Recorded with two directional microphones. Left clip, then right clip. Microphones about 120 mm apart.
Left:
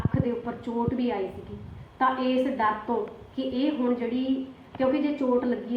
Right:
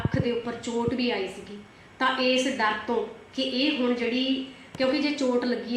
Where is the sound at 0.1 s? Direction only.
5° left (ahead or behind).